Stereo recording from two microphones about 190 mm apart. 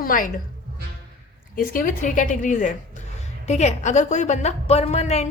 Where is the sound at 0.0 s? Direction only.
45° left (ahead or behind).